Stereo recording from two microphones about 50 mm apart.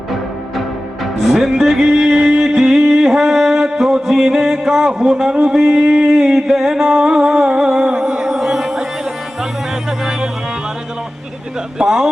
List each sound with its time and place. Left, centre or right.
1.3 s music: centre
10.0 s music: centre
11.8 s music: centre